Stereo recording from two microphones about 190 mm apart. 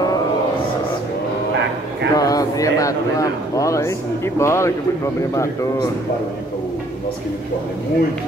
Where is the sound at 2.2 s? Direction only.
20° left (ahead or behind).